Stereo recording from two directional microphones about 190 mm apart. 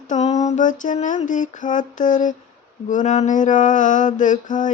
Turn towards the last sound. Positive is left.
turn(degrees=40)  # may be behind; listen again after turning